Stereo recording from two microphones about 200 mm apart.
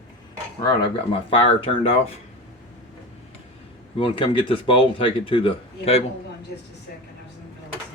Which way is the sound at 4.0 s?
25° left (ahead or behind).